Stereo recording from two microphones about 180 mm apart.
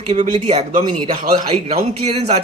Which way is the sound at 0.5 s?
25° right (ahead or behind).